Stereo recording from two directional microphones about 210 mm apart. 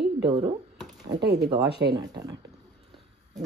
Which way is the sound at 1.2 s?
50° right (ahead or behind).